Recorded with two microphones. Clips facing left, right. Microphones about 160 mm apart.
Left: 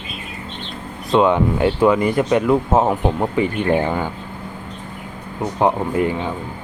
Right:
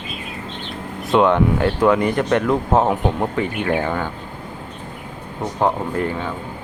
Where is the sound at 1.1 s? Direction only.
5° left (ahead or behind).